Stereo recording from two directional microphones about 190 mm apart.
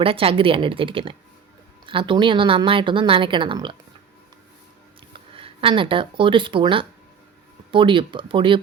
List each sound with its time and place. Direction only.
0.0 s speech: 30° right (ahead or behind)
5.3 s speech: 30° right (ahead or behind)